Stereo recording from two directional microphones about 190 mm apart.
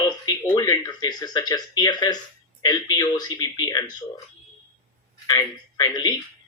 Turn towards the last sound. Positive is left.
turn(degrees=20)  # may be behind; listen again after turning